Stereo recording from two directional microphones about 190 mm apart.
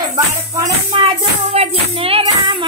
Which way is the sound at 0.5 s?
25° right (ahead or behind).